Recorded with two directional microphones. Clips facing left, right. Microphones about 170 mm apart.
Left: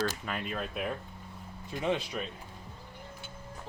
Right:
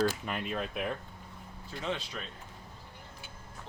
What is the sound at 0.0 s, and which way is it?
Speech, centre (ahead or behind).